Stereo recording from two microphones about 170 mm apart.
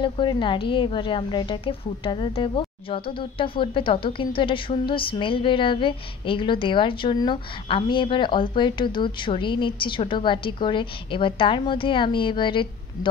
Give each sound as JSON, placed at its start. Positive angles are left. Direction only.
{"t": 0.0, "sound": "a woman's voice", "side_deg": 30}